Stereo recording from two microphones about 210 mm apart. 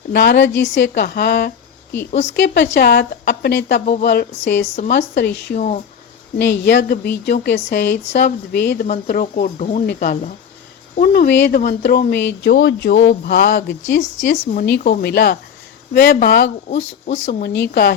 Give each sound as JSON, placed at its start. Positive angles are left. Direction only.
{"t": 0.1, "sound": "a woman's voice", "side_deg": 55}
{"t": 3.8, "sound": "speech", "side_deg": 35}
{"t": 4.0, "sound": "a woman's voice", "side_deg": 55}
{"t": 5.5, "sound": "speech", "side_deg": 35}
{"t": 6.4, "sound": "a woman's voice", "side_deg": 55}
{"t": 8.9, "sound": "speech", "side_deg": 40}
{"t": 11.6, "sound": "a woman's voice", "side_deg": 45}
{"t": 13.9, "sound": "speech", "side_deg": 40}
{"t": 14.8, "sound": "speech", "side_deg": 50}
{"t": 17.4, "sound": "speech", "side_deg": 55}